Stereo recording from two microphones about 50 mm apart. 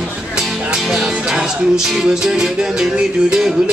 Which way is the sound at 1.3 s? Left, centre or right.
Centre.